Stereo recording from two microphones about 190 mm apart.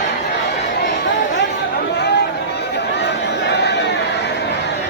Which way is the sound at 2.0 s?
60° left (ahead or behind).